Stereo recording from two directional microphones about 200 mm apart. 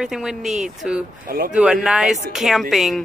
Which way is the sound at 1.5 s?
5° right (ahead or behind).